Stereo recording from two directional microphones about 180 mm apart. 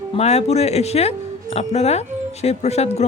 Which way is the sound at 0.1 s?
35° left (ahead or behind).